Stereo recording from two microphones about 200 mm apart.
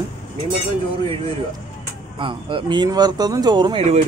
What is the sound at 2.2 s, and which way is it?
Speech, 25° right (ahead or behind).